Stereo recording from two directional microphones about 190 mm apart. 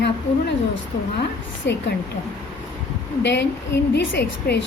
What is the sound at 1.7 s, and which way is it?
Speech, 65° left (ahead or behind).